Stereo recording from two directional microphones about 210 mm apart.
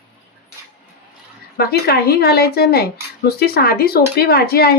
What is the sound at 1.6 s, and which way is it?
Speech, 50° left (ahead or behind).